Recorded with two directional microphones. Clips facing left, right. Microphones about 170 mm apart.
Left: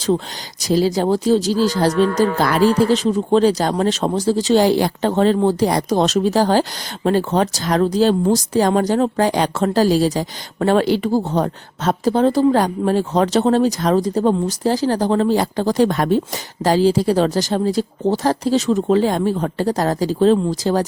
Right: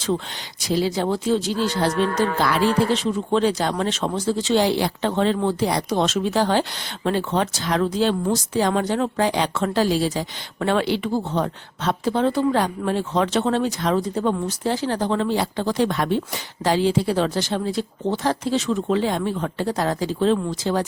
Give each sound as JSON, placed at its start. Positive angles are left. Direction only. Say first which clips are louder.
{"t": 0.6, "sound": "speech", "louder": "left 5 dB", "side_deg": 40}